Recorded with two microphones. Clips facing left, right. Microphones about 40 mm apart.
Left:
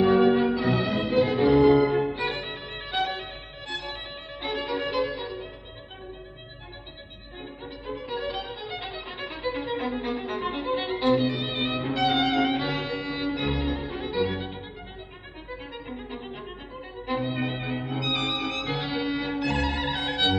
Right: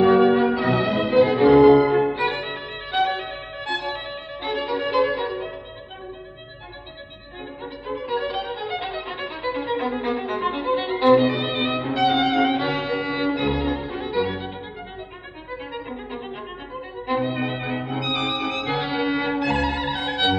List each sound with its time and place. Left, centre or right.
0.0 s music: centre
4.4 s violin: centre
4.9 s music: right
7.6 s violin: centre
11.1 s violin: right
11.8 s music: centre; by 13.4 s right
13.4 s music: centre
15.5 s violin: centre